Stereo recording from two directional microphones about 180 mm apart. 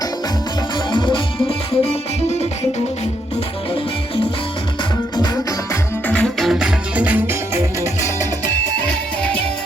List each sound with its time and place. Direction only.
0.9 s music: 25° left (ahead or behind)
6.1 s music: 5° left (ahead or behind)